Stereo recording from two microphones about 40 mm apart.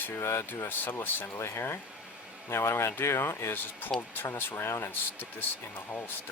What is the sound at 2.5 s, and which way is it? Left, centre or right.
Speech, left.